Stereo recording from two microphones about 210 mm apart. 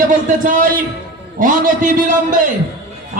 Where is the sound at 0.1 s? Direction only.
40° right (ahead or behind).